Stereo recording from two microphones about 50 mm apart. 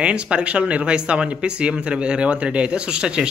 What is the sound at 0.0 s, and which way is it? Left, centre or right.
Speech, right.